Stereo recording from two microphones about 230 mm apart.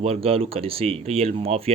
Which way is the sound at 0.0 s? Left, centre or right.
Right.